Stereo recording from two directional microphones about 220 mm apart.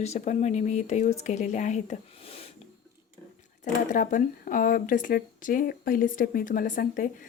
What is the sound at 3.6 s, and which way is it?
Speech, 35° left (ahead or behind).